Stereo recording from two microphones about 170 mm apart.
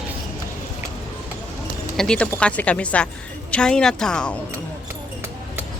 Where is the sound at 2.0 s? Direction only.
5° left (ahead or behind).